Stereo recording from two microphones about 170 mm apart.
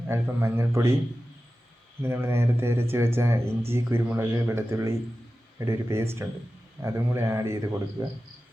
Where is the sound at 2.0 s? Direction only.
15° right (ahead or behind).